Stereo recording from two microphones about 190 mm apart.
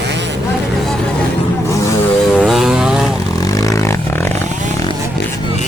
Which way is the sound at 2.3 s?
Centre (ahead or behind).